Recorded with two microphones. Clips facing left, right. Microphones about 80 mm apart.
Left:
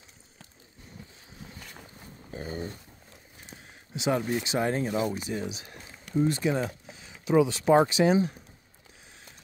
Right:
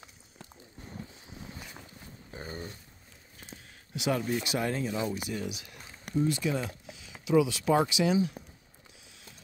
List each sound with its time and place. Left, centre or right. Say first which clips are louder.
3.9 s speech: left 2 dB; left